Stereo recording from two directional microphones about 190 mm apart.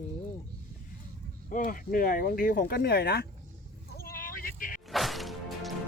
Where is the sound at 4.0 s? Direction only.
50° left (ahead or behind).